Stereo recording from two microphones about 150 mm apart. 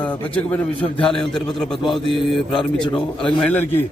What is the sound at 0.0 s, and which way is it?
A man's voice, 10° left (ahead or behind).